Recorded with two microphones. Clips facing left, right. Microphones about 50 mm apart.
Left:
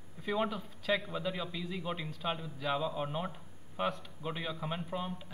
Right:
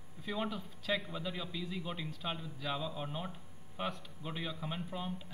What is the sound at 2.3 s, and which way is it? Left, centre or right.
A man's voice, centre.